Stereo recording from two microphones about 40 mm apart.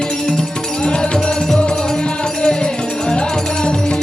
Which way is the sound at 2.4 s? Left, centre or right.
Centre.